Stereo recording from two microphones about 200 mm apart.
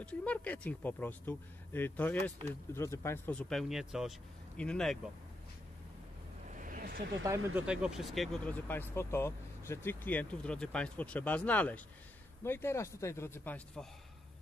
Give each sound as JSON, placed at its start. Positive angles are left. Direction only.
{"t": 0.0, "sound": "speech", "side_deg": 5}
{"t": 6.5, "sound": "vehicle", "side_deg": -45}
{"t": 7.2, "sound": "speech", "side_deg": -5}